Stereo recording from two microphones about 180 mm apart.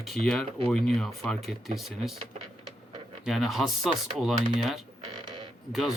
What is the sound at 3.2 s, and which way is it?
Speech, centre (ahead or behind).